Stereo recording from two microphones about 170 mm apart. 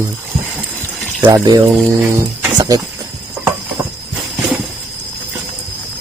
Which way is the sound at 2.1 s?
20° right (ahead or behind).